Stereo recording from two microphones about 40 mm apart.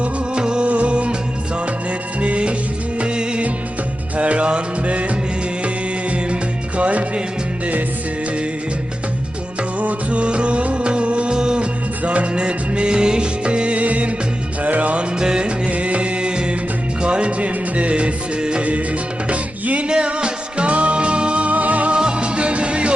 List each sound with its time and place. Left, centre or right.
0.0 s music: right
2.2 s music: right
6.7 s music: right
9.8 s music: right
12.0 s music: right
15.2 s music: centre
15.7 s music: right
19.9 s music: right
21.9 s music: right